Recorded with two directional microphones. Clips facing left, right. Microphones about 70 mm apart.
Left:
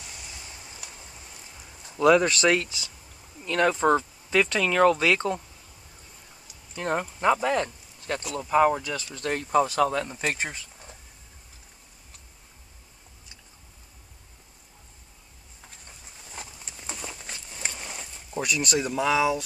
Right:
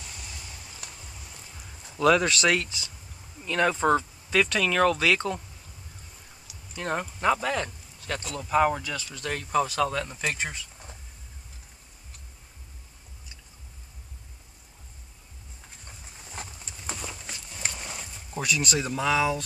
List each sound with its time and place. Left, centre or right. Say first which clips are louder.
0.0 s vehicle: even; centre
2.0 s speech: left 2 dB; centre
6.8 s speech: left 2 dB; centre
8.9 s speech: left 3 dB; left
16.3 s horse: right 1 dB; centre
17.7 s speech: even; centre